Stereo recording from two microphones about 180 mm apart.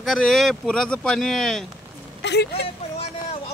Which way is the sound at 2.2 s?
70° left (ahead or behind).